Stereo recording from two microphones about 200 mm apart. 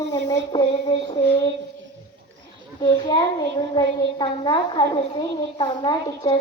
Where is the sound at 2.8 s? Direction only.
20° left (ahead or behind).